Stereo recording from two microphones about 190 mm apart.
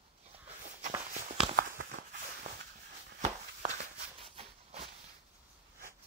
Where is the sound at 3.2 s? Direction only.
40° right (ahead or behind).